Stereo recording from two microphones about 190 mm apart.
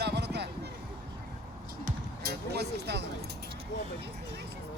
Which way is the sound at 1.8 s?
55° right (ahead or behind).